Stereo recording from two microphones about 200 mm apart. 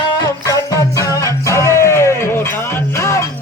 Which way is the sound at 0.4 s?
15° left (ahead or behind).